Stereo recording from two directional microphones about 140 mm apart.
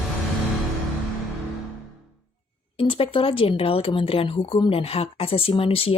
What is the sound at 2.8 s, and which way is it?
A woman's voice, 40° left (ahead or behind).